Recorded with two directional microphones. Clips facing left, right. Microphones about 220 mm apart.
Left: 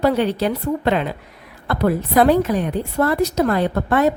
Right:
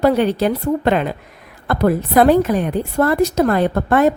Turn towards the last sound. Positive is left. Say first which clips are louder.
# right 3 dB
turn(degrees=-50)  # may be behind; listen again after turning